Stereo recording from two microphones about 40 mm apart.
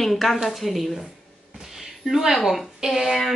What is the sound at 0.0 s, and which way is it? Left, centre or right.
Speech, centre.